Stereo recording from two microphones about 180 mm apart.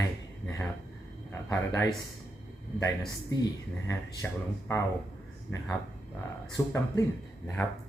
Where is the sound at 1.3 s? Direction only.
15° left (ahead or behind).